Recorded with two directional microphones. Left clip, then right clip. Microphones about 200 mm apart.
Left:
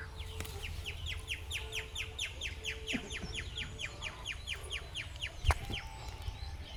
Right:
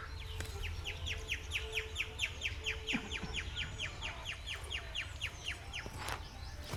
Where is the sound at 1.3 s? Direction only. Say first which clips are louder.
Right 1 dB; 35° left (ahead or behind).